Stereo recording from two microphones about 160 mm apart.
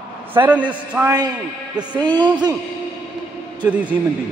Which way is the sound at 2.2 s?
25° right (ahead or behind).